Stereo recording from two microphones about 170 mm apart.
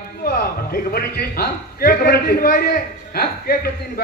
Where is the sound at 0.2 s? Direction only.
60° left (ahead or behind).